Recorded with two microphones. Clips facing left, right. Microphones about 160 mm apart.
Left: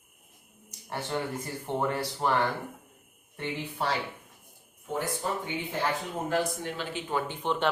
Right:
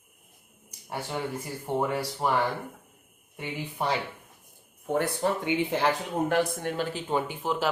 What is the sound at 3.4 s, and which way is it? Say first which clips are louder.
Speech: even; 15° right (ahead or behind).